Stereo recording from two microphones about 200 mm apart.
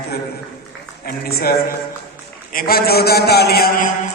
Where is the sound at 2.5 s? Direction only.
45° left (ahead or behind).